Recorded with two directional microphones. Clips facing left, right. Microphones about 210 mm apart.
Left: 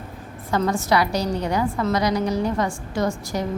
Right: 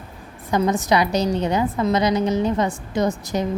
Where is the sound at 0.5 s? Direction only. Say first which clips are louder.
Right 2 dB; 15° right (ahead or behind).